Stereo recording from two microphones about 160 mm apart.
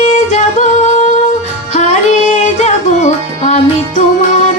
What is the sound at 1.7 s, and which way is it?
Music, 45° left (ahead or behind).